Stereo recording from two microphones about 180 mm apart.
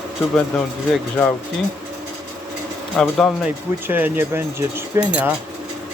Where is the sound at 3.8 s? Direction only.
10° right (ahead or behind).